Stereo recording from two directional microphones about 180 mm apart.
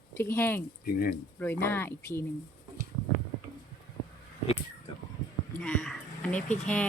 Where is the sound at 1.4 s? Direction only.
10° left (ahead or behind).